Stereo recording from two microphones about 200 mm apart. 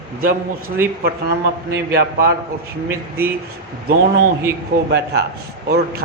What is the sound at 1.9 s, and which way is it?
Speech, 50° right (ahead or behind).